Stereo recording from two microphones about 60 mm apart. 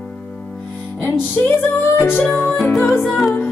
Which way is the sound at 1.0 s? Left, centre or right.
Left.